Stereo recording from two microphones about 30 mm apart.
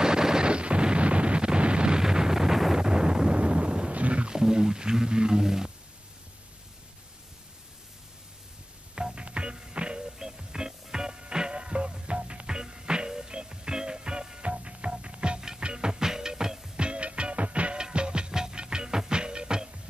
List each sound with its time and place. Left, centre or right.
0.0 s artillery fire: right
0.5 s a sound: right
2.0 s wind noise: right
2.8 s wind noise: right
3.3 s wind noise: right
3.9 s wild animals: right
4.3 s a sound: right
8.9 s music: right
10.1 s music: centre; by 12.4 s right
12.4 s music: right
14.4 s music: right
16.7 s music: right
17.7 s music: right
18.3 s music: right